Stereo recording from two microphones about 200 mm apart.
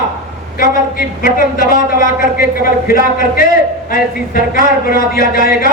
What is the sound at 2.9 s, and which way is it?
Speech, 50° left (ahead or behind).